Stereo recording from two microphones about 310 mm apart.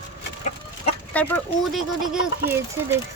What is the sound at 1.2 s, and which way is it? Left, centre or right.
Speech, centre.